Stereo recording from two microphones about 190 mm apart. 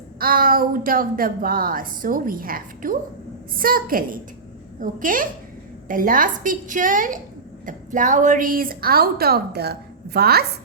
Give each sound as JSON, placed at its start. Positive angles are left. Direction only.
{"t": 0.2, "sound": "a woman's voice", "side_deg": -50}